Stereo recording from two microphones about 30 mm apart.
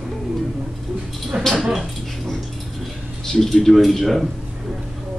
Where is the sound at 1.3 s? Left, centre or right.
Right.